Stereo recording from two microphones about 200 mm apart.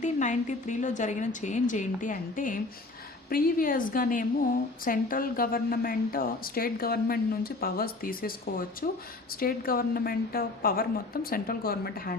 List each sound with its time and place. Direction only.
0.0 s a woman's voice: 40° left (ahead or behind)